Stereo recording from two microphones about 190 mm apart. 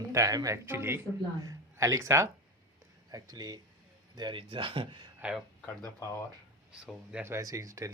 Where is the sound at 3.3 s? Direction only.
20° right (ahead or behind).